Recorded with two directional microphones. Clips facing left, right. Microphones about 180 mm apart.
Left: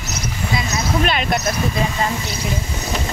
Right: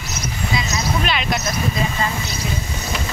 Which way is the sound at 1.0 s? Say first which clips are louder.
Left 3 dB; 50° left (ahead or behind).